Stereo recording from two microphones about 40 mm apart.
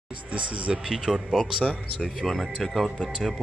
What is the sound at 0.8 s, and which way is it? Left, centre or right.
Speech, centre.